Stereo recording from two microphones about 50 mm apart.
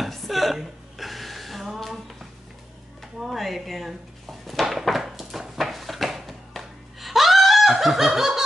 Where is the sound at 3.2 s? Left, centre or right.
Centre.